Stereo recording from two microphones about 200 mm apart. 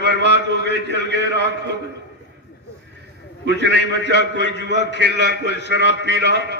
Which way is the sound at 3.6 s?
60° right (ahead or behind).